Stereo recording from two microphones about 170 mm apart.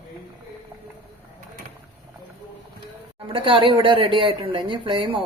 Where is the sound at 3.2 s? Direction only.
30° right (ahead or behind).